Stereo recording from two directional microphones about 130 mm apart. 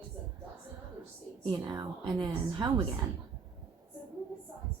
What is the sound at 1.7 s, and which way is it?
A woman's voice, 35° right (ahead or behind).